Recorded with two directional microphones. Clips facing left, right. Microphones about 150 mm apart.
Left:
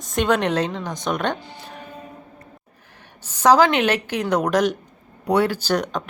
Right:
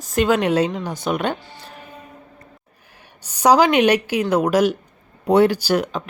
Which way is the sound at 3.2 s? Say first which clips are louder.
Right 1 dB; 15° right (ahead or behind).